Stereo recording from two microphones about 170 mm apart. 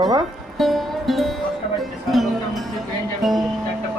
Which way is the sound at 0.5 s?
Centre (ahead or behind).